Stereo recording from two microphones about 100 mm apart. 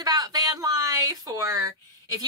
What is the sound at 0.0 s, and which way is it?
Speech, 40° right (ahead or behind).